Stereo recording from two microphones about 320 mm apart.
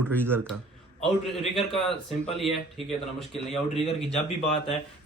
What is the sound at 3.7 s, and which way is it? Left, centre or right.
Speech, centre.